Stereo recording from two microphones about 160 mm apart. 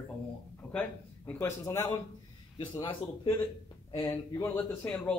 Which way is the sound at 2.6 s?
30° left (ahead or behind).